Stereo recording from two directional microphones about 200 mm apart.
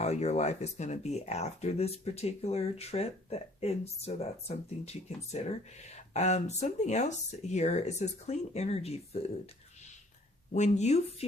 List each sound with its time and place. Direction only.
0.0 s speech: 35° left (ahead or behind)
10.5 s speech: 35° left (ahead or behind)